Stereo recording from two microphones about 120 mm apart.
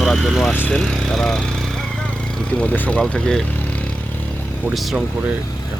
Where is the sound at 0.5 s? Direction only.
15° left (ahead or behind).